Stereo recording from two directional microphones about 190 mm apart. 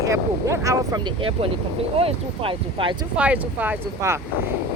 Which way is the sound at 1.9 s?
30° right (ahead or behind).